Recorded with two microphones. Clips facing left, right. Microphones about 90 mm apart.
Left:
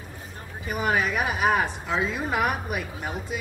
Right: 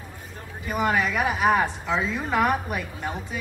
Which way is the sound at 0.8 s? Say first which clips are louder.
Right 1 dB; 20° left (ahead or behind).